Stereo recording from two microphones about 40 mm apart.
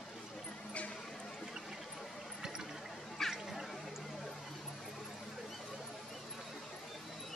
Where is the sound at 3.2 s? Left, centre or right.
Centre.